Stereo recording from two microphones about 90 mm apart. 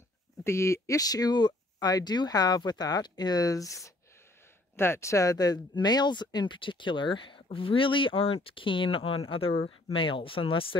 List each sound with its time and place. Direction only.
0.4 s speech: 30° left (ahead or behind); by 10.8 s 80° left